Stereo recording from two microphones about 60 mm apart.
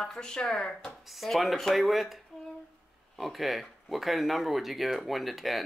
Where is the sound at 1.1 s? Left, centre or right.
Centre.